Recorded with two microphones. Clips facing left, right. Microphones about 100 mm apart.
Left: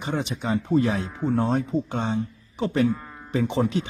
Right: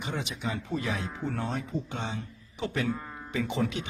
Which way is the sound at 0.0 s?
40° left (ahead or behind).